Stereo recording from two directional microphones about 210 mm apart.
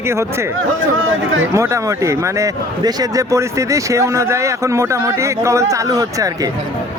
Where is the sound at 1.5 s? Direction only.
15° right (ahead or behind).